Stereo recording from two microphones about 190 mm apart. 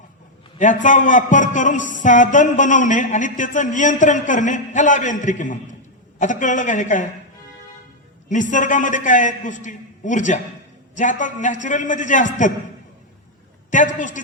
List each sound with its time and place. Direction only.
0.6 s a man's voice: 40° left (ahead or behind)
8.3 s a man's voice: 40° left (ahead or behind)
13.7 s a man's voice: 40° left (ahead or behind)